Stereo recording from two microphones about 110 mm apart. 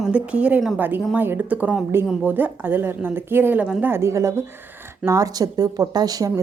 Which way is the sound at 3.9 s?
25° right (ahead or behind).